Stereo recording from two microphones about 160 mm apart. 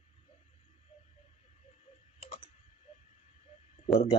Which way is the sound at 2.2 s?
45° left (ahead or behind).